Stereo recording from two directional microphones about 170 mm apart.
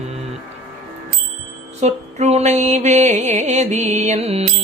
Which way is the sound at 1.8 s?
40° right (ahead or behind).